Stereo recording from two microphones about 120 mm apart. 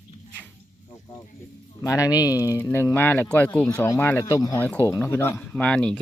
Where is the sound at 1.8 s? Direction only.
30° left (ahead or behind).